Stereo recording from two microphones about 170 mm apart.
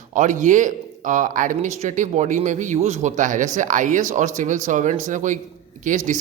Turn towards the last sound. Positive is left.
turn(degrees=-50)  # may be behind; listen again after turning